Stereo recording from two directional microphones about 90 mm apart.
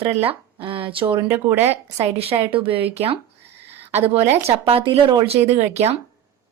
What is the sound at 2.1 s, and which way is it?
Speech, 90° right.